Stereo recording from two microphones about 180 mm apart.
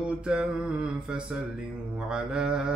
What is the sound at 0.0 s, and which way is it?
Mantra, 5° right (ahead or behind).